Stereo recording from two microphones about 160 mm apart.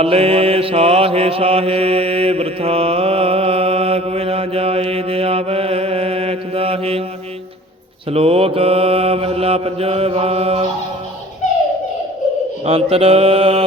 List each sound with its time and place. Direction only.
0.0 s mantra: 40° right (ahead or behind)
8.1 s mantra: 40° right (ahead or behind)
12.6 s mantra: 35° right (ahead or behind)